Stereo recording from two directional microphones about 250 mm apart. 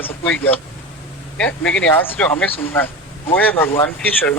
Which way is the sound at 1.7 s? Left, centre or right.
Centre.